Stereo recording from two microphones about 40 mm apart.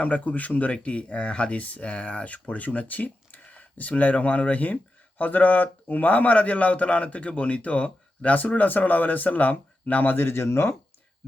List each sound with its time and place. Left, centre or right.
0.0 s speech: left